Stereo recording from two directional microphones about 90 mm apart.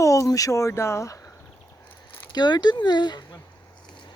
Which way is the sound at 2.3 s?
55° left (ahead or behind).